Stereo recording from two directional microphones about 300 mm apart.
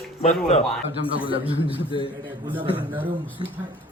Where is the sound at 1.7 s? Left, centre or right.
Centre.